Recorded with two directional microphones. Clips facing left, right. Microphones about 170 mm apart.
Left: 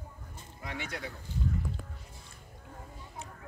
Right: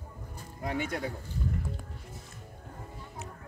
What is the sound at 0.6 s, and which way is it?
Speech, 45° right (ahead or behind).